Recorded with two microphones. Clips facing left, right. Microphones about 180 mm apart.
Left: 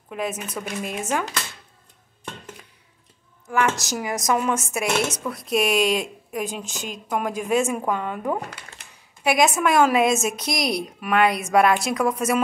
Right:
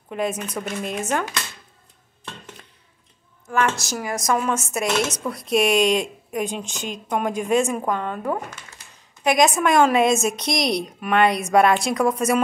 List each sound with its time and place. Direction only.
0.1 s speech: 5° left (ahead or behind)
2.2 s a sound: 5° left (ahead or behind)
3.4 s speech: 15° left (ahead or behind)
5.3 s a woman's voice: centre (ahead or behind)
8.4 s speech: 35° left (ahead or behind)
9.2 s a woman's voice: 5° left (ahead or behind)